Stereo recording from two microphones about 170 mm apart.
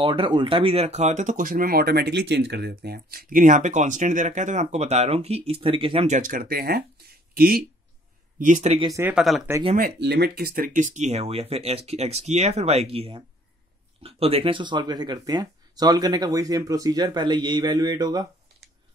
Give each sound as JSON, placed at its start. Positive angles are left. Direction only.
{"t": 0.0, "sound": "speech", "side_deg": -30}
{"t": 6.0, "sound": "speech", "side_deg": -50}
{"t": 8.4, "sound": "speech", "side_deg": -45}
{"t": 8.7, "sound": "speech", "side_deg": -25}
{"t": 9.0, "sound": "speech", "side_deg": 0}
{"t": 9.8, "sound": "speech", "side_deg": -70}